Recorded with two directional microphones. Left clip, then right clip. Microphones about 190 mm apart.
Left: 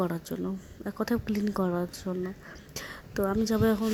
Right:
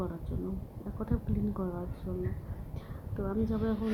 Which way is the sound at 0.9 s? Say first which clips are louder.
Left 7 dB; 40° left (ahead or behind).